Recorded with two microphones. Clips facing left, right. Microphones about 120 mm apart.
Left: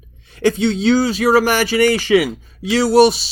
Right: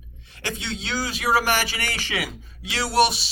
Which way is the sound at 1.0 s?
35° left (ahead or behind).